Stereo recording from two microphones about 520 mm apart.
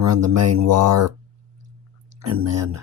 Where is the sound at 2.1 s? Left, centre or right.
Right.